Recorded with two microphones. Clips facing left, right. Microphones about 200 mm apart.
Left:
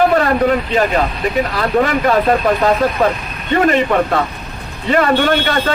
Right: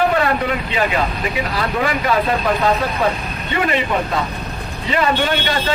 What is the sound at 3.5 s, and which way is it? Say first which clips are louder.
Speech: left 6 dB; 45° left (ahead or behind).